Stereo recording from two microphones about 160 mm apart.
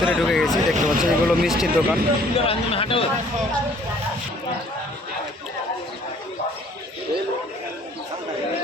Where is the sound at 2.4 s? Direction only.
35° left (ahead or behind).